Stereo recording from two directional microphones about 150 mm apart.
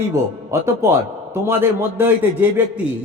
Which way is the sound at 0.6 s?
20° right (ahead or behind).